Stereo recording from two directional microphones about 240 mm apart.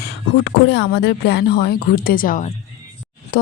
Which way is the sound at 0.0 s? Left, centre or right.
Left.